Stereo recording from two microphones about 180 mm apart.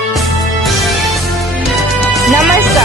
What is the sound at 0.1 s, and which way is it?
Music, centre (ahead or behind).